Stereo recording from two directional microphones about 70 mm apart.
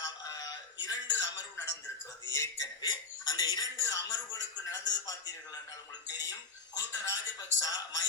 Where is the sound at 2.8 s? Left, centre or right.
Left.